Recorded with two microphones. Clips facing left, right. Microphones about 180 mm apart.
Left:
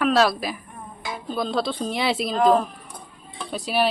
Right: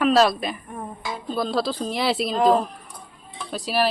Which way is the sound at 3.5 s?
Centre (ahead or behind).